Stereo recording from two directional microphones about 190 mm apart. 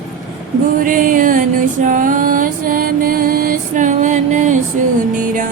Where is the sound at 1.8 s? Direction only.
45° right (ahead or behind).